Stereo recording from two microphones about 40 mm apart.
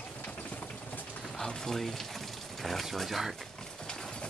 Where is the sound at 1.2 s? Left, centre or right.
Centre.